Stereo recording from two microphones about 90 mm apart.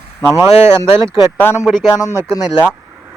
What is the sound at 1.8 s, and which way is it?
Speech, 40° left (ahead or behind).